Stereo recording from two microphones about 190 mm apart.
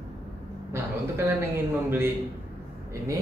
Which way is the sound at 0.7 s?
15° right (ahead or behind).